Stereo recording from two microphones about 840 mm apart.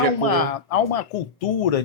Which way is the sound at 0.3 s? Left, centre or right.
Left.